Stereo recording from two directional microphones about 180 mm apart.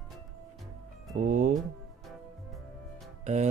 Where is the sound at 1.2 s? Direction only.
45° right (ahead or behind).